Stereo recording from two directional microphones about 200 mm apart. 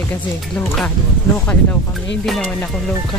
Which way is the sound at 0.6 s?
5° left (ahead or behind).